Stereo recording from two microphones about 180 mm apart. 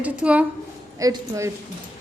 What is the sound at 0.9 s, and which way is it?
Speech, 20° right (ahead or behind).